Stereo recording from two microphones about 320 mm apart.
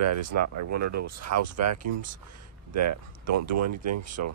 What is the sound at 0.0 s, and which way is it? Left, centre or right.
Speech, right.